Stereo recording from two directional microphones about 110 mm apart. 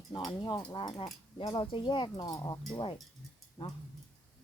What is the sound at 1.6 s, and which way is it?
Speech, 50° left (ahead or behind).